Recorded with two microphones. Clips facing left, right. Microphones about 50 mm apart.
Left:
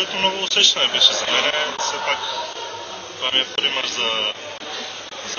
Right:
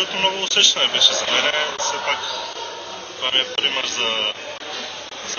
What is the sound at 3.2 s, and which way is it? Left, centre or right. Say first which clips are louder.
Speech: even; centre.